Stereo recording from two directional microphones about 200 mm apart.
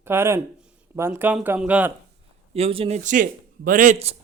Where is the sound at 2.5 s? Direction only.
30° right (ahead or behind).